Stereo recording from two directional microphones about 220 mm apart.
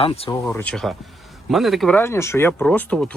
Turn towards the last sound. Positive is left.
turn(degrees=5)  # may be behind; listen again after turning